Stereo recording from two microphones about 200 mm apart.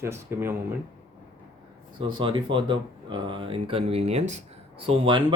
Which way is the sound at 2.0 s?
25° right (ahead or behind).